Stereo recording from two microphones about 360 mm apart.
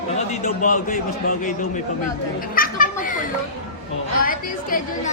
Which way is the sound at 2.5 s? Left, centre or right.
Left.